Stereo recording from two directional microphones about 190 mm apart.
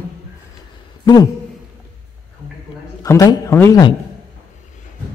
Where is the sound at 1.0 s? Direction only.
20° left (ahead or behind).